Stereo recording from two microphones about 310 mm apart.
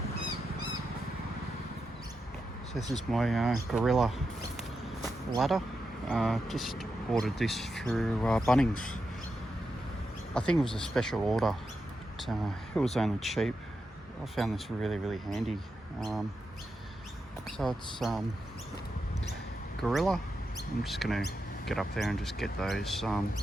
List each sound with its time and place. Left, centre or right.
2.9 s speech: centre
5.4 s speech: centre
8.7 s speech: left
10.3 s speech: centre
17.4 s speech: centre
19.8 s speech: centre